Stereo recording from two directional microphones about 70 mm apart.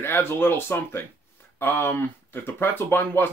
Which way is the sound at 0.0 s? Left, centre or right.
Left.